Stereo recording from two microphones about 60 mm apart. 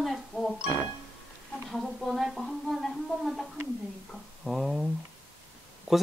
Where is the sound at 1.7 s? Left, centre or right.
Centre.